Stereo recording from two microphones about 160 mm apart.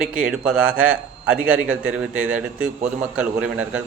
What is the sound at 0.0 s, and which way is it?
A man's voice, 5° right (ahead or behind).